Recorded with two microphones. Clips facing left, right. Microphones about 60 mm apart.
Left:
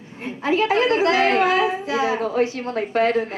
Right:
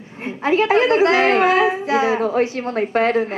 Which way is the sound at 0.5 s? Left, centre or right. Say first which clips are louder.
Right 3 dB; right.